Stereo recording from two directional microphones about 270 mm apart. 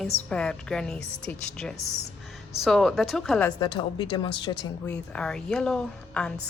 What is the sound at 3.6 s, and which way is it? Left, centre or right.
Speech, centre.